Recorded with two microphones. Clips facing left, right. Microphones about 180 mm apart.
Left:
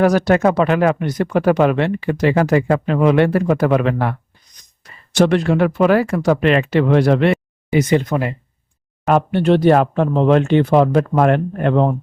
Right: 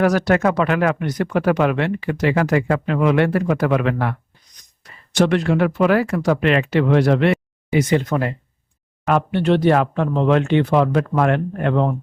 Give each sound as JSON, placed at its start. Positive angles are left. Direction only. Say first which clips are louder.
{"t": 0.0, "sound": "speech", "louder": "left 3 dB", "side_deg": 25}
{"t": 5.1, "sound": "speech", "louder": "left 2 dB", "side_deg": 35}
{"t": 7.9, "sound": "speech", "louder": "left 2 dB", "side_deg": 20}
{"t": 9.0, "sound": "speech", "louder": "left 3 dB", "side_deg": 40}